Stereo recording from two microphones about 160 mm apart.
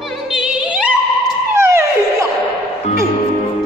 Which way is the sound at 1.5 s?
15° right (ahead or behind).